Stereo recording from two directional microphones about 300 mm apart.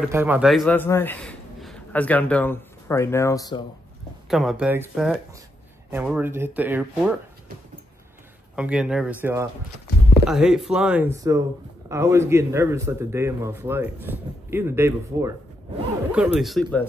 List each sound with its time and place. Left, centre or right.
0.0 s a man's voice: centre
4.3 s speech: centre
8.5 s speech: centre